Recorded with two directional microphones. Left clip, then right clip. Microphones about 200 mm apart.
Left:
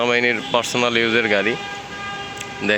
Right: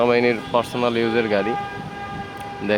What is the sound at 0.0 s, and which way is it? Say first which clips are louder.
Speech: even; centre (ahead or behind).